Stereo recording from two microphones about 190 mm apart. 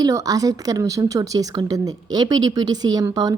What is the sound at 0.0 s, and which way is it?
A woman's voice, 20° right (ahead or behind).